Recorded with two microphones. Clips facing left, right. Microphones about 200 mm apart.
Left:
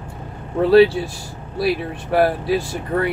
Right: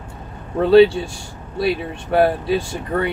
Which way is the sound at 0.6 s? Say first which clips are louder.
Right 1 dB; 5° left (ahead or behind).